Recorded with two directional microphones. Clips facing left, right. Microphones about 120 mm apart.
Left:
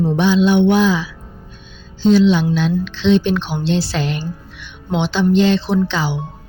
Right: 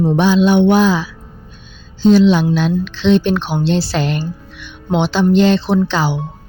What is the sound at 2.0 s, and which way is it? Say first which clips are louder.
Speech: right 2 dB; 60° right (ahead or behind).